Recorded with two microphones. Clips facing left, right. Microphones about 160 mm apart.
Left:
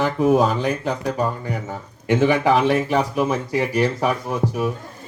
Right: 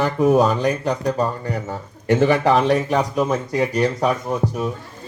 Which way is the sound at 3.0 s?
10° left (ahead or behind).